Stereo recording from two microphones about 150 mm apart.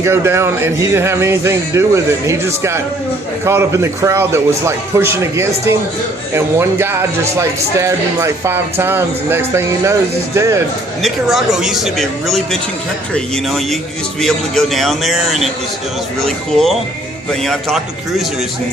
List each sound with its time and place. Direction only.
0.0 s a man's voice: 15° right (ahead or behind)
11.0 s speech: centre (ahead or behind)